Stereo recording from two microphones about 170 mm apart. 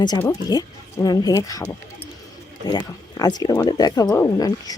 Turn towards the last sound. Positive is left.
turn(degrees=20)  # may be behind; listen again after turning